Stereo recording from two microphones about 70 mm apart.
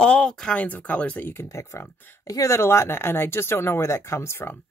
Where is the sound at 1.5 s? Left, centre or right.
Left.